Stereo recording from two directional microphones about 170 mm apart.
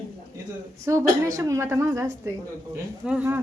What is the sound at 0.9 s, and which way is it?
A woman's voice, 20° right (ahead or behind).